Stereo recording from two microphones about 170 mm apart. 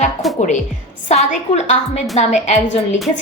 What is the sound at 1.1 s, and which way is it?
A woman's voice, 40° left (ahead or behind).